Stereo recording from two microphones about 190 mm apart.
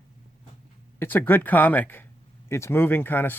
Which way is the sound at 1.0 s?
10° left (ahead or behind).